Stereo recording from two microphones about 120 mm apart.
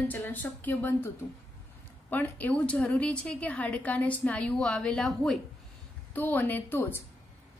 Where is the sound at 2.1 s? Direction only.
15° left (ahead or behind).